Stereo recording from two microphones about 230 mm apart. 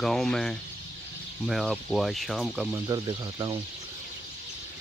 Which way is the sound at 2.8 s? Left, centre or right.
Centre.